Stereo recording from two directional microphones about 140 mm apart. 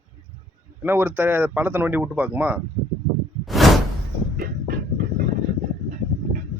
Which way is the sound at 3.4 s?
Centre (ahead or behind).